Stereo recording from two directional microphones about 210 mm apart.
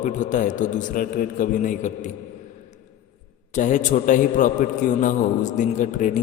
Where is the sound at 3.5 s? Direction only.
35° left (ahead or behind).